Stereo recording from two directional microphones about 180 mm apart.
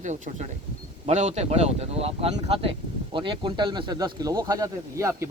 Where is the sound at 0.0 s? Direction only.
40° right (ahead or behind).